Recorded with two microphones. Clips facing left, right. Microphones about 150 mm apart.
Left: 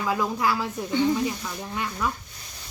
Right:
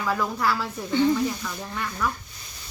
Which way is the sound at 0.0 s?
20° left (ahead or behind).